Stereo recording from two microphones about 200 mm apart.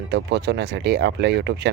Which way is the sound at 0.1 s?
60° right (ahead or behind).